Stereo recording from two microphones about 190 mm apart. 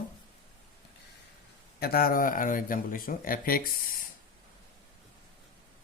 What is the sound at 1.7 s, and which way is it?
Speech, 55° left (ahead or behind).